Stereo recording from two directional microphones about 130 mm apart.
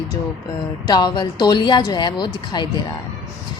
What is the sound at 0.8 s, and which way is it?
Speech, 35° left (ahead or behind).